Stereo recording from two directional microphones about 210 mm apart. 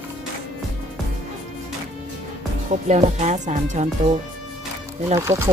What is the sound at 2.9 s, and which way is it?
Speech, 35° right (ahead or behind).